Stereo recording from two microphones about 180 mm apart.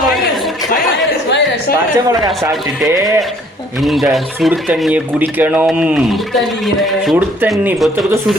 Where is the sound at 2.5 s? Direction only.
Centre (ahead or behind).